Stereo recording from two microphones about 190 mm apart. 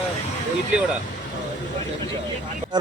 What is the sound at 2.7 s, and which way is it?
Speech, 20° right (ahead or behind).